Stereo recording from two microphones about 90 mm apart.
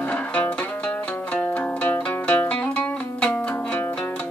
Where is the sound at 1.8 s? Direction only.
15° left (ahead or behind).